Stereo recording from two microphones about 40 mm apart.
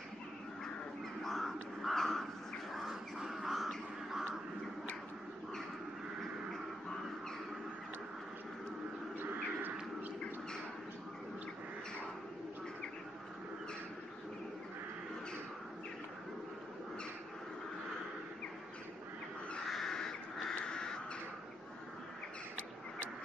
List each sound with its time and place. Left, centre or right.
1.2 s crow: centre
2.7 s bird: centre
3.2 s crow: centre
19.7 s crow: centre